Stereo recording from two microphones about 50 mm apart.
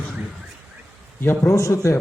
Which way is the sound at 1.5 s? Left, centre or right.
Left.